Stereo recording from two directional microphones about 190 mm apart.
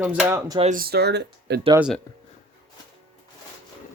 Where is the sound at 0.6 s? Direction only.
45° right (ahead or behind); by 1.6 s 60° right (ahead or behind).